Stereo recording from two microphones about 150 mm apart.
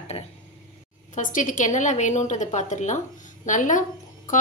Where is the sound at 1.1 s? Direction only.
60° left (ahead or behind).